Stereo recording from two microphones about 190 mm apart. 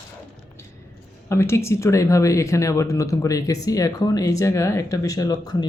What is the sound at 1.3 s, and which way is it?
Speech, 15° left (ahead or behind).